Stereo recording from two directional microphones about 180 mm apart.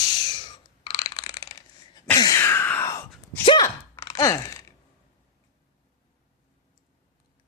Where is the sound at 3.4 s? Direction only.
25° left (ahead or behind).